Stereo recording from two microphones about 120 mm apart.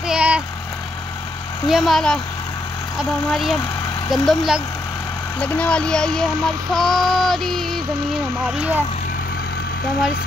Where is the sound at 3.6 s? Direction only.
30° left (ahead or behind).